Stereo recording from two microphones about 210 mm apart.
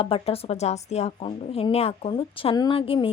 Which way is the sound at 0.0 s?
25° left (ahead or behind).